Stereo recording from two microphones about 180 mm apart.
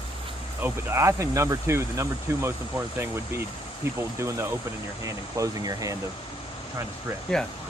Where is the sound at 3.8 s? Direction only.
15° right (ahead or behind).